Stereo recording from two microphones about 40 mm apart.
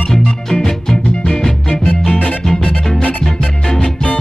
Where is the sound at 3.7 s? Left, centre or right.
Centre.